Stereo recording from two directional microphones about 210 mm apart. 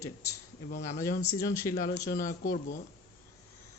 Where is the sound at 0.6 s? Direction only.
50° left (ahead or behind).